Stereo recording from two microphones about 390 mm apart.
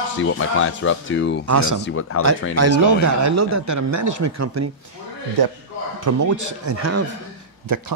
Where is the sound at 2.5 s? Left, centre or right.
Right.